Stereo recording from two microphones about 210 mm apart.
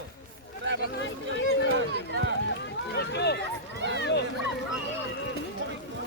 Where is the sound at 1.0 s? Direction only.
60° left (ahead or behind).